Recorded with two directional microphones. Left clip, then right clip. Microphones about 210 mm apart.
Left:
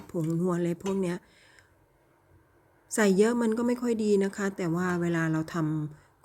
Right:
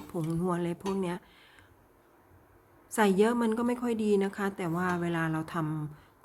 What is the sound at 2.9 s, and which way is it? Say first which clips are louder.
A woman's voice: left 1 dB; 15° left (ahead or behind).